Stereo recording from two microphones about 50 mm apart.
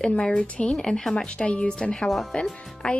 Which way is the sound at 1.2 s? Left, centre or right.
Left.